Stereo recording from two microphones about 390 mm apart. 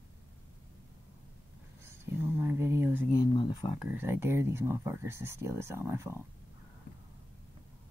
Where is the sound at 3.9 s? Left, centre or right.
Centre.